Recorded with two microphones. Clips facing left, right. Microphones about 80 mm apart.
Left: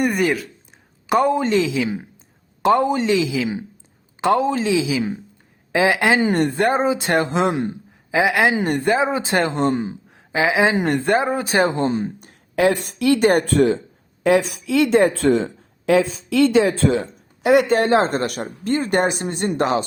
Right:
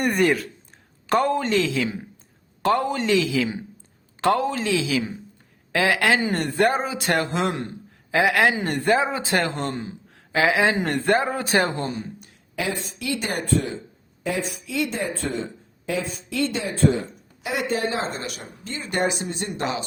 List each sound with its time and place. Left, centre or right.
0.0 s speech: centre
1.0 s a woman's voice: centre; by 17.1 s left
17.4 s speech: left